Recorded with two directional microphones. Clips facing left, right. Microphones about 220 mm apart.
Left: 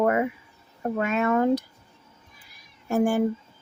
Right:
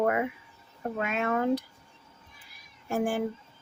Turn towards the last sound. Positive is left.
turn(degrees=45)  # may be behind; listen again after turning